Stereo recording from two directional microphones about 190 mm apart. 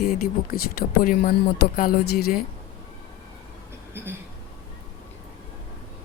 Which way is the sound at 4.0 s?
10° right (ahead or behind).